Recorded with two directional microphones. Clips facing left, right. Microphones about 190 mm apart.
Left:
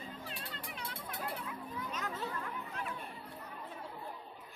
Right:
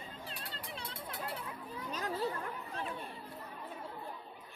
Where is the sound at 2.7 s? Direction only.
30° right (ahead or behind).